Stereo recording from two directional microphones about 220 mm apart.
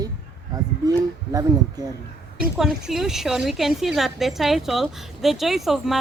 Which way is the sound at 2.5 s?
Centre (ahead or behind).